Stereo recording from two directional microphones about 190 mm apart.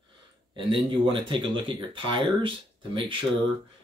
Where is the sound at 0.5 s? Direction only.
25° right (ahead or behind).